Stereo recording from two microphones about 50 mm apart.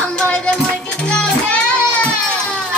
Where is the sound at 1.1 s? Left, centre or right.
Centre.